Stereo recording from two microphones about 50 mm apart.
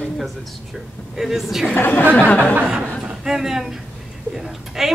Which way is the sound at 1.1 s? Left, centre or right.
Centre.